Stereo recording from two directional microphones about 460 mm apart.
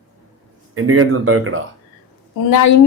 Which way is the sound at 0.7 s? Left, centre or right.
Right.